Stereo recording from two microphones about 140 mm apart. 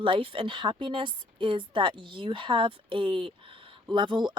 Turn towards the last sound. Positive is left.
turn(degrees=-35)  # may be behind; listen again after turning